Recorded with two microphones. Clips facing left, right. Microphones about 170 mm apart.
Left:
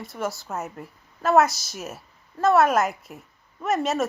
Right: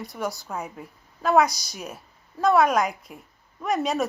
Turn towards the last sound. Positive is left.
turn(degrees=0)  # may be behind; listen again after turning